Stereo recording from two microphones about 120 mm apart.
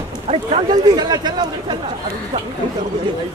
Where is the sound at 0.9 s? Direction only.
35° right (ahead or behind).